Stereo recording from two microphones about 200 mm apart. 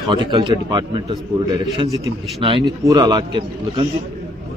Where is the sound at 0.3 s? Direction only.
20° right (ahead or behind).